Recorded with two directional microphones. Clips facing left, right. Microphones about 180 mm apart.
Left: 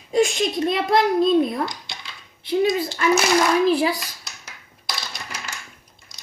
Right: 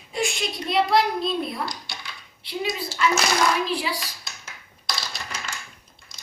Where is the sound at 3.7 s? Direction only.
45° left (ahead or behind).